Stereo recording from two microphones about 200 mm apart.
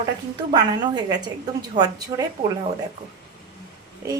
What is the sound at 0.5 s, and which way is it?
Speech, 20° right (ahead or behind).